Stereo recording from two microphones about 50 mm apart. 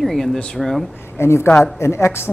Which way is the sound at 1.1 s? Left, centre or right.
Left.